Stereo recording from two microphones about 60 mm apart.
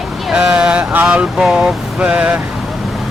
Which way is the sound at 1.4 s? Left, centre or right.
Centre.